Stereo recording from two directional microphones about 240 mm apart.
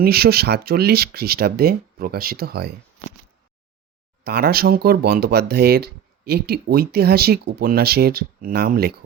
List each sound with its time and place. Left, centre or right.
0.0 s speech: right
4.2 s speech: right